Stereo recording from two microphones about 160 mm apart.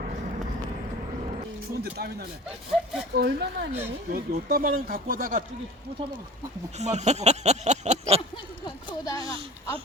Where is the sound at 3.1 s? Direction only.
90° right.